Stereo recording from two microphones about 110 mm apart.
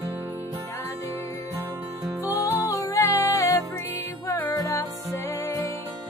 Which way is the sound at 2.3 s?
30° left (ahead or behind).